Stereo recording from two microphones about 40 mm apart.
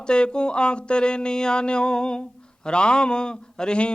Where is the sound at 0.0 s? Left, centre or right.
Left.